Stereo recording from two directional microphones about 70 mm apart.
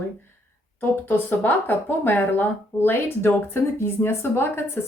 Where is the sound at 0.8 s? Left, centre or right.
Left.